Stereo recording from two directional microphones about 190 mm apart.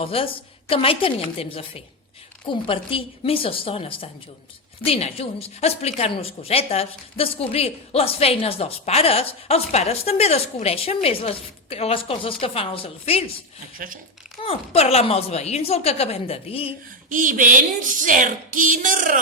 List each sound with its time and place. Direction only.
0.0 s a woman's voice: 30° left (ahead or behind)
13.7 s speech: 45° right (ahead or behind)
14.4 s a woman's voice: 30° left (ahead or behind)
17.1 s speech: 45° right (ahead or behind)